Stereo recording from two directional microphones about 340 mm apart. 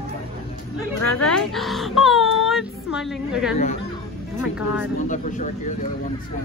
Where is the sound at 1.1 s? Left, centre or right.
Centre.